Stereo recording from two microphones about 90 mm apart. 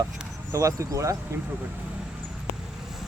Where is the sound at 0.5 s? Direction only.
35° right (ahead or behind).